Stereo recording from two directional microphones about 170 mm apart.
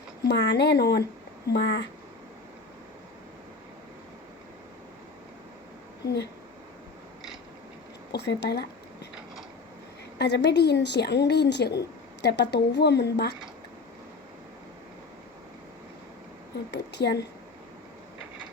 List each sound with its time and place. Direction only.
0.3 s speech: 90° left
1.5 s speech: 90° left
8.1 s speech: 85° left
10.2 s speech: 85° left
16.7 s speech: 75° left (ahead or behind)